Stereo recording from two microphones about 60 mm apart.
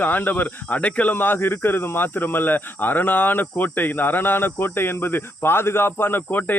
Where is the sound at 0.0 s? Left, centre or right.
Left.